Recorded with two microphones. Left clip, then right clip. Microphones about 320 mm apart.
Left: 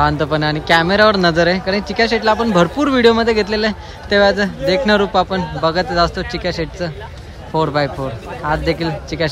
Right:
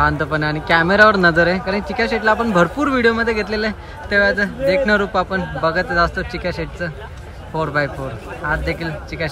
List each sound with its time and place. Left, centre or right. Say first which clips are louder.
0.0 s speech: left 2 dB; centre